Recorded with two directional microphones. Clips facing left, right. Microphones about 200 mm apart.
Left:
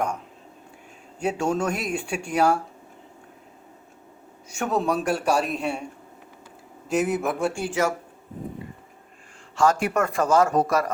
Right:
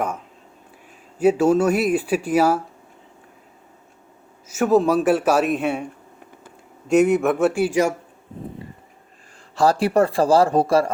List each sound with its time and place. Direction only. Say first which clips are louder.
1.2 s speech: right 8 dB; 5° right (ahead or behind)
4.4 s speech: right 8 dB; 5° right (ahead or behind)
6.8 s speech: right 7 dB; centre (ahead or behind)
9.6 s speech: right 4 dB; 35° right (ahead or behind)